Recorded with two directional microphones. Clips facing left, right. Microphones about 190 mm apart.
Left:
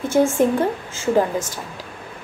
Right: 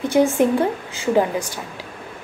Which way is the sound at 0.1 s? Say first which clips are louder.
Even; 15° right (ahead or behind).